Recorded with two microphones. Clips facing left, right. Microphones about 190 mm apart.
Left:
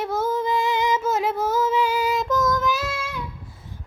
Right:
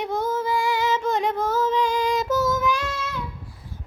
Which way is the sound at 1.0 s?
5° left (ahead or behind).